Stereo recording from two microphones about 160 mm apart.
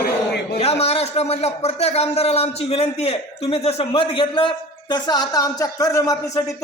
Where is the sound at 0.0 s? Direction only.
70° left (ahead or behind).